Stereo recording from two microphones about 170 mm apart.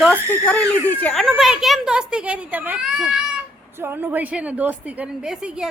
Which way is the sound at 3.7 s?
15° right (ahead or behind).